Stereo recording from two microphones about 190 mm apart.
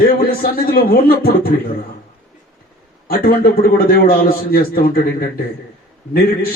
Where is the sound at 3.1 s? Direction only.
50° left (ahead or behind).